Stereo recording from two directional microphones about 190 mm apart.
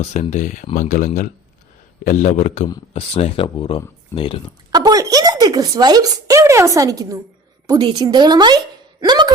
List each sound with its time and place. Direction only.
0.0 s speech: 35° left (ahead or behind)
4.7 s a woman's voice: 20° right (ahead or behind)